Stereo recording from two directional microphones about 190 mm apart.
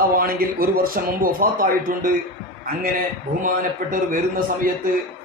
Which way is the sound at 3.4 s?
45° right (ahead or behind).